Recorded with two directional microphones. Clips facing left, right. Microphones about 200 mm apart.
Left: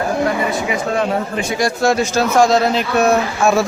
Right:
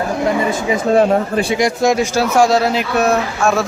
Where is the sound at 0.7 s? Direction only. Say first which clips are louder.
Right 5 dB; 35° right (ahead or behind).